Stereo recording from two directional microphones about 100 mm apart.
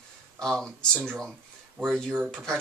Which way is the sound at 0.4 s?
5° left (ahead or behind).